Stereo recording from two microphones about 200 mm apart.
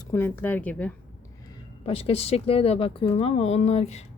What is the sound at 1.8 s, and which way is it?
Speech, 30° left (ahead or behind).